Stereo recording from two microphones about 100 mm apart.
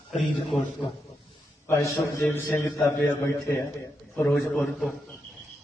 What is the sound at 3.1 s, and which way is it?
Speech, 25° left (ahead or behind).